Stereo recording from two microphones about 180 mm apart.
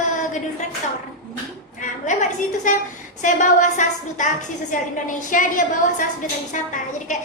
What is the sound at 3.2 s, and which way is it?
A woman's voice, 45° left (ahead or behind).